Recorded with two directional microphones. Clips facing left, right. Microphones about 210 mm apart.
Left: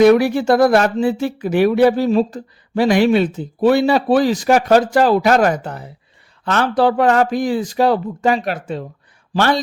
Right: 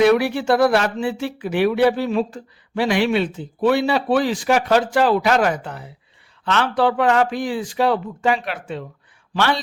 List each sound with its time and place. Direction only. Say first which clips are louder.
0.0 s speech: left 5 dB; 45° left (ahead or behind)